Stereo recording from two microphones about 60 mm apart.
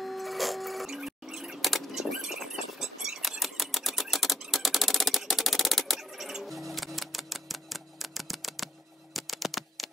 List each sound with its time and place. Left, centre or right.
0.0 s printer: centre
6.7 s typewriter: centre
9.1 s a sound: centre